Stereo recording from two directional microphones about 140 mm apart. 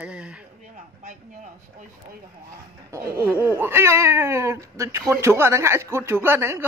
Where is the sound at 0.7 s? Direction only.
70° right (ahead or behind).